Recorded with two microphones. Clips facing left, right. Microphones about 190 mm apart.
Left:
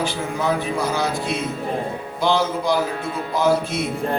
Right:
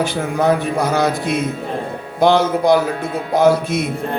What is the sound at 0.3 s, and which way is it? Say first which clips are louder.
Speech: right 6 dB; 55° right (ahead or behind).